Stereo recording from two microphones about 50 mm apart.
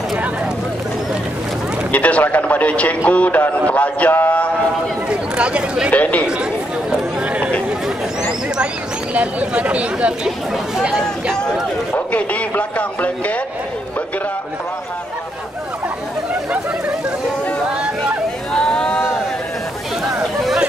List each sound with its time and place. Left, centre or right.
1.9 s a man's voice: left
5.1 s speech: centre
5.9 s speech: left
9.1 s speech: right
11.9 s a sound: left
18.5 s a sound: centre